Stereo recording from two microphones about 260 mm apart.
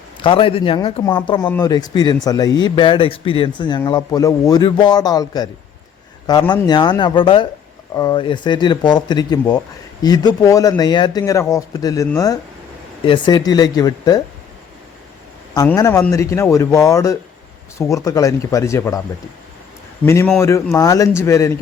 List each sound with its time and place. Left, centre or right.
0.2 s a man's voice: centre
15.5 s speech: centre
20.1 s speech: centre